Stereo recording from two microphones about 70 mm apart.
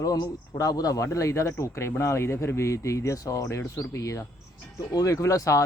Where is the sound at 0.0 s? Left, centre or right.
Left.